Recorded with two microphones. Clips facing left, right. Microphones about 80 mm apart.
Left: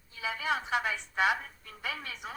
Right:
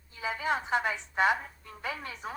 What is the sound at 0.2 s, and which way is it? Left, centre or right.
A woman's voice, right.